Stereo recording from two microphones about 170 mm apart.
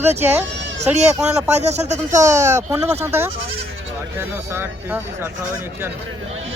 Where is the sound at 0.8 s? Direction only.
40° right (ahead or behind).